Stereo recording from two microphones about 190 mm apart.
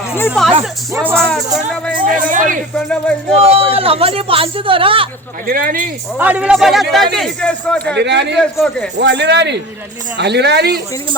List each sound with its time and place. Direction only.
0.3 s a man's voice: centre (ahead or behind)
2.0 s a sound: 45° right (ahead or behind)
2.7 s a man's voice: 5° left (ahead or behind)
3.4 s speech: 30° right (ahead or behind)
5.5 s speech: 50° right (ahead or behind)
6.1 s a man's voice: 10° right (ahead or behind)
7.9 s speech: 65° right (ahead or behind)
8.4 s a man's voice: centre (ahead or behind)
9.0 s speech: 65° right (ahead or behind)